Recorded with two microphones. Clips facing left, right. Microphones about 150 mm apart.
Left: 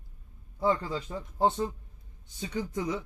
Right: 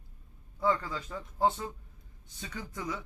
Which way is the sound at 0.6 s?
25° left (ahead or behind).